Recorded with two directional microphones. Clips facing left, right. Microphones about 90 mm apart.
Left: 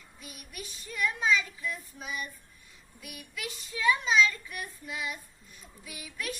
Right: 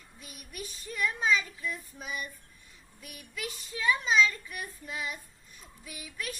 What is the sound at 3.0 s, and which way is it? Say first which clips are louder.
A child's voice: even; 40° right (ahead or behind).